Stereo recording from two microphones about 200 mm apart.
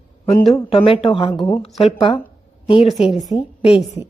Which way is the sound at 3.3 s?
30° left (ahead or behind).